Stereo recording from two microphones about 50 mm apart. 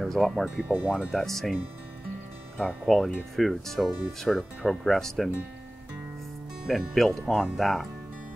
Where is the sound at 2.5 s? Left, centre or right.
Centre.